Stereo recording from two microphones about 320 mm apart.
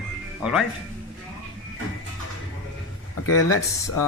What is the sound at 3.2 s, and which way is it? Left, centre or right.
Speech, left.